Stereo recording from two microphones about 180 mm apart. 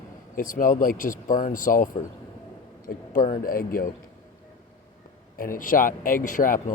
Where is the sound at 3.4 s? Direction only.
50° left (ahead or behind).